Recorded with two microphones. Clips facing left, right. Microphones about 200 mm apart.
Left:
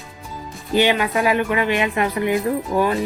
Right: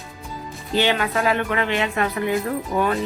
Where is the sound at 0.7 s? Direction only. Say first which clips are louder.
Left 3 dB; 15° left (ahead or behind).